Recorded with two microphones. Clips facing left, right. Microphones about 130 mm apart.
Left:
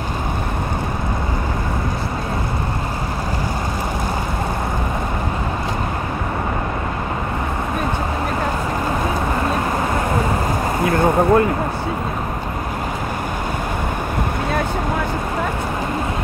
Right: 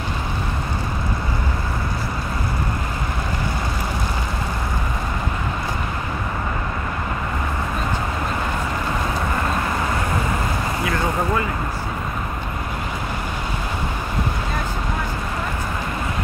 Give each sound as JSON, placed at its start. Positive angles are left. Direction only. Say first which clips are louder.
{"t": 10.8, "sound": "vehicle", "louder": "left 8 dB", "side_deg": 50}